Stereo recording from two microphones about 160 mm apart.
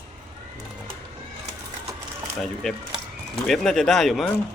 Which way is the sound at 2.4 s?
Centre (ahead or behind).